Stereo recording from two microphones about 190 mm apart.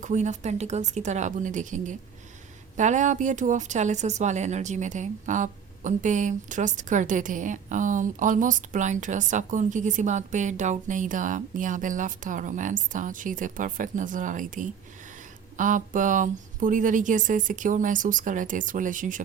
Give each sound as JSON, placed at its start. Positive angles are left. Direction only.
{"t": 0.0, "sound": "a woman's voice", "side_deg": -40}